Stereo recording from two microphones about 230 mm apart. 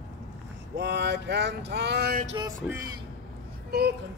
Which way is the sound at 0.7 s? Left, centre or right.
Right.